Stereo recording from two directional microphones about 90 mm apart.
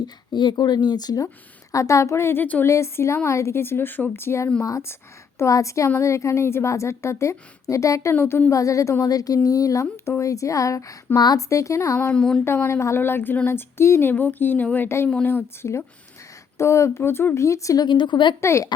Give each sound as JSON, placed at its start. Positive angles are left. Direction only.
{"t": 0.0, "sound": "a woman's voice", "side_deg": 55}
{"t": 2.6, "sound": "a woman's voice", "side_deg": 35}
{"t": 8.1, "sound": "a woman's voice", "side_deg": 25}
{"t": 9.8, "sound": "speech", "side_deg": 25}
{"t": 10.2, "sound": "a woman's voice", "side_deg": 35}
{"t": 12.1, "sound": "a sound", "side_deg": 10}
{"t": 12.5, "sound": "a woman's voice", "side_deg": 30}
{"t": 17.8, "sound": "a woman's voice", "side_deg": 60}
{"t": 18.3, "sound": "a woman's voice", "side_deg": 30}